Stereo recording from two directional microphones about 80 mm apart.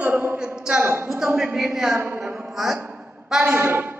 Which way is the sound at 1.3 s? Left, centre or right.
Centre.